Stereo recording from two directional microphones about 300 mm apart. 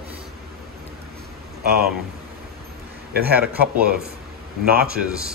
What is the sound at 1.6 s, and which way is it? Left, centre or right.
Speech, right.